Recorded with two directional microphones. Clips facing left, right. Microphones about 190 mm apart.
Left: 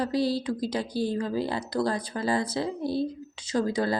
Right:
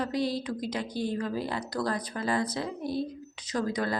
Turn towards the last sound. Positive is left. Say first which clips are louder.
# left 4 dB
turn(degrees=30)  # may be behind; listen again after turning